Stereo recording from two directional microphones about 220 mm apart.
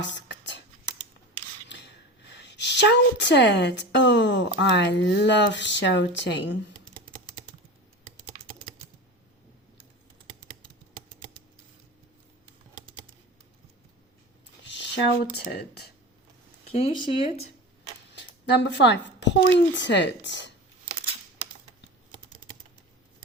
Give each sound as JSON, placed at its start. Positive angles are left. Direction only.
{"t": 0.0, "sound": "a sound", "side_deg": 55}
{"t": 2.3, "sound": "a woman's voice", "side_deg": 50}
{"t": 12.7, "sound": "typing", "side_deg": -20}
{"t": 15.4, "sound": "a woman's voice", "side_deg": 45}
{"t": 16.7, "sound": "speech", "side_deg": 25}
{"t": 18.1, "sound": "speech", "side_deg": 50}